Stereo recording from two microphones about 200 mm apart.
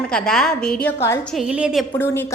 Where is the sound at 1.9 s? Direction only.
10° left (ahead or behind).